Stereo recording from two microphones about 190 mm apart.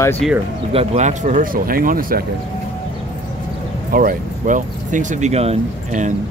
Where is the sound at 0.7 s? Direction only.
35° right (ahead or behind).